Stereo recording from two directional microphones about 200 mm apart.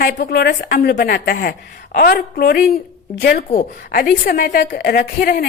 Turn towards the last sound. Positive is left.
turn(degrees=50)  # may be behind; listen again after turning